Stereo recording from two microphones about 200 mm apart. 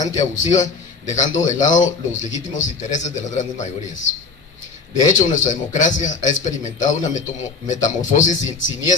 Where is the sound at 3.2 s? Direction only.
35° left (ahead or behind).